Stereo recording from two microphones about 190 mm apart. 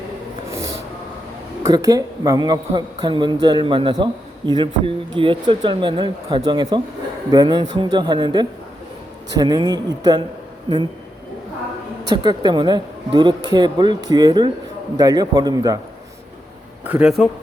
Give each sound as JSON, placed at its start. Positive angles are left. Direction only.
{"t": 1.6, "sound": "a man's voice", "side_deg": -20}
{"t": 12.1, "sound": "a man's voice", "side_deg": -25}
{"t": 16.8, "sound": "a man's voice", "side_deg": -5}